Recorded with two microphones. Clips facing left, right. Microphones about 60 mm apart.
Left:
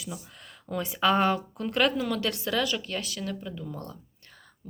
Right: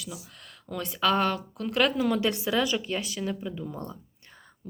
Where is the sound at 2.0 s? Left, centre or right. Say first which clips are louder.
Right 3 dB; centre.